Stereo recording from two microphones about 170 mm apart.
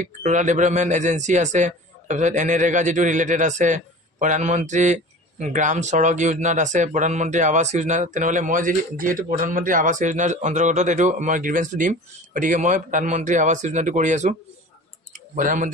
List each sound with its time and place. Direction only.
0.0 s a man's voice: 45° right (ahead or behind)
15.3 s a man's voice: 50° right (ahead or behind)